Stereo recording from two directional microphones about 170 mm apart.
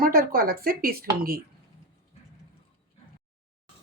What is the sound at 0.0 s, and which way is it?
Speech, 60° right (ahead or behind).